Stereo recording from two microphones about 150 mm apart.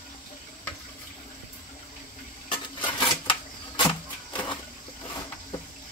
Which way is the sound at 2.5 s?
35° left (ahead or behind).